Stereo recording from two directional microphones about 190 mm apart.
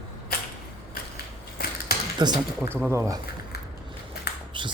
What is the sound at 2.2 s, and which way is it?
Speech, 20° right (ahead or behind).